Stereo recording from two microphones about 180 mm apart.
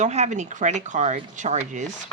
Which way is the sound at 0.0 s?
40° right (ahead or behind).